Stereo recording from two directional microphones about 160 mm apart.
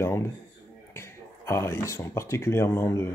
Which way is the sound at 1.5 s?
15° left (ahead or behind).